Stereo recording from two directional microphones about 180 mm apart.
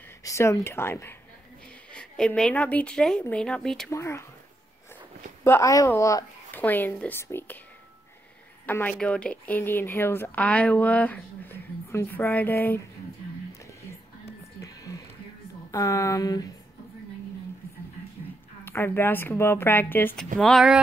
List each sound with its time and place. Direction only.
0.2 s a woman's voice: 15° left (ahead or behind)
3.9 s speech: 15° left (ahead or behind)
5.4 s speech: 15° left (ahead or behind)
8.6 s speech: 10° left (ahead or behind)
13.5 s whispering: 15° left (ahead or behind)
15.7 s speech: 15° left (ahead or behind)
18.6 s speech: 10° left (ahead or behind)
20.3 s a woman's voice: centre (ahead or behind)